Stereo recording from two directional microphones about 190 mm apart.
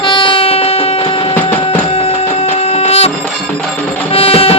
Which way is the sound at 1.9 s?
30° left (ahead or behind).